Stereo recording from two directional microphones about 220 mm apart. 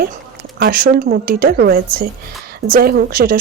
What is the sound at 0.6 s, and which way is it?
Speech, 40° right (ahead or behind).